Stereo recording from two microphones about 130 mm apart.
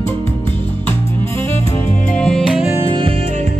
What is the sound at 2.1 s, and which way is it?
Music, 5° left (ahead or behind).